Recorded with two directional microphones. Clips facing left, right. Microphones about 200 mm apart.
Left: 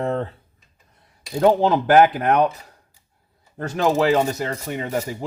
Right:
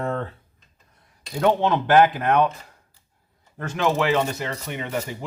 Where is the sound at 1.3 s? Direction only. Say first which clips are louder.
Left 4 dB; 35° left (ahead or behind).